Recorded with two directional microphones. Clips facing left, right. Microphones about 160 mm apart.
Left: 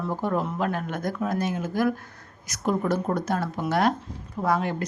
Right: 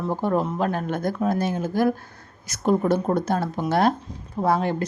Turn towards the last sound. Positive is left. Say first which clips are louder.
# right 3 dB
turn(degrees=-30)  # may be behind; listen again after turning